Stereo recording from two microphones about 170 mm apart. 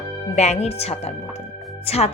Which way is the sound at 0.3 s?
40° left (ahead or behind).